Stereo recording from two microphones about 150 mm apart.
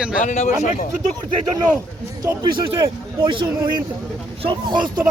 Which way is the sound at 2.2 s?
30° right (ahead or behind).